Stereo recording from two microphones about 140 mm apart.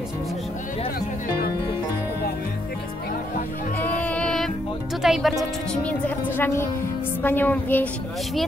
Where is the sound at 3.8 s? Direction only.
10° left (ahead or behind).